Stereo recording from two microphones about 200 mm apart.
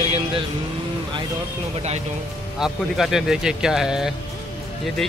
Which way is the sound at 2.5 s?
Centre (ahead or behind).